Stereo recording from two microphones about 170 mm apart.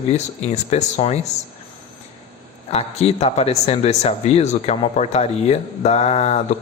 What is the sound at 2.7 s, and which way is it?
Speech, 35° left (ahead or behind).